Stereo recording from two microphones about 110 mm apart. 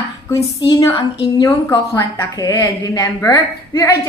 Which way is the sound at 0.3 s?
35° left (ahead or behind).